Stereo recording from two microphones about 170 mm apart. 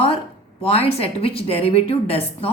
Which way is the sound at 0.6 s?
35° left (ahead or behind).